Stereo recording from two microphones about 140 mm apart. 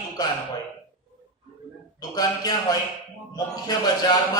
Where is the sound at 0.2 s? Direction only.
30° left (ahead or behind).